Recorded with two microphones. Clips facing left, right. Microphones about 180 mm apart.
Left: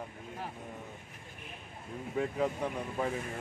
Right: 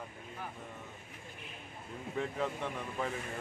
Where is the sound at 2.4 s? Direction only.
40° left (ahead or behind).